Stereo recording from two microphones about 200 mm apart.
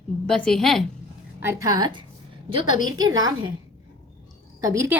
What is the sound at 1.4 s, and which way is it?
A woman's voice, 15° right (ahead or behind).